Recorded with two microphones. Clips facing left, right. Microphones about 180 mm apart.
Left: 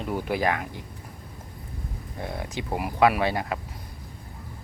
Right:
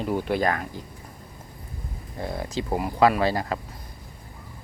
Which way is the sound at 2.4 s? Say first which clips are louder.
Right 4 dB; 15° left (ahead or behind).